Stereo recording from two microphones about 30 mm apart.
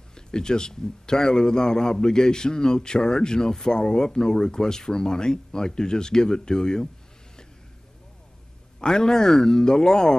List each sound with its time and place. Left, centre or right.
0.1 s a man's voice: left
8.7 s a man's voice: left